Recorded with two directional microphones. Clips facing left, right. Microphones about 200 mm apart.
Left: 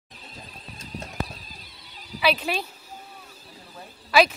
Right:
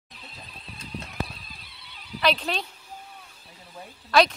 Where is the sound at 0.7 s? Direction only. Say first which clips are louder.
Left 1 dB; 45° left (ahead or behind).